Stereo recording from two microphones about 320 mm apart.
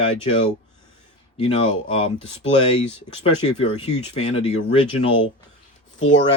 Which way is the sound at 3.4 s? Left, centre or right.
Centre.